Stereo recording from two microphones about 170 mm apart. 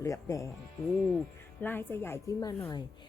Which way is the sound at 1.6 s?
10° left (ahead or behind).